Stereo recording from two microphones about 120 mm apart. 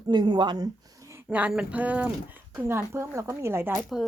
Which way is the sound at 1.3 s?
10° right (ahead or behind).